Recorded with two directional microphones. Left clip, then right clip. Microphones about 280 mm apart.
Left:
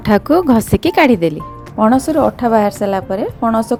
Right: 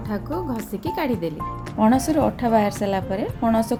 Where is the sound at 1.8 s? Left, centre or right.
Centre.